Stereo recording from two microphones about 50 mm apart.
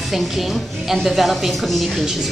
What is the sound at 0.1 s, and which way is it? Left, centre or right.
A woman's voice, centre.